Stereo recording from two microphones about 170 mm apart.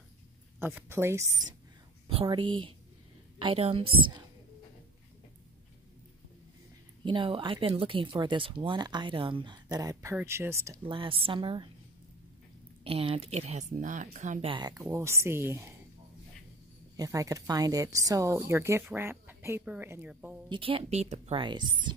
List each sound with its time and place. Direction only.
0.6 s a woman's voice: 10° right (ahead or behind)
2.0 s speech: 30° right (ahead or behind)
7.1 s a woman's voice: 30° right (ahead or behind)
10.9 s speech: 30° right (ahead or behind)
12.8 s speech: 35° right (ahead or behind)
14.5 s a woman's voice: 25° right (ahead or behind)
16.9 s a woman's voice: 20° right (ahead or behind)
20.4 s speech: 30° right (ahead or behind)